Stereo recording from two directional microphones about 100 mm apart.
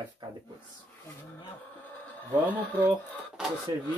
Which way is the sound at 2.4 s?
15° left (ahead or behind).